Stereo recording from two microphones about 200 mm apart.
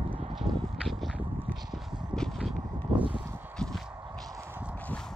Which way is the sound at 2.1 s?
Centre (ahead or behind).